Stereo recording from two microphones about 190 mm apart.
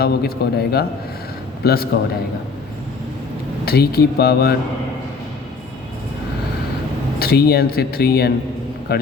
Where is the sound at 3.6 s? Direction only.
55° left (ahead or behind).